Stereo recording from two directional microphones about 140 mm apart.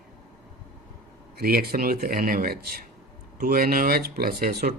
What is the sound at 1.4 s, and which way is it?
Speech, 90° right.